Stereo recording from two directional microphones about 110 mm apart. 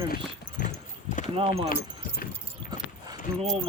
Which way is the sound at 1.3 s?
55° right (ahead or behind).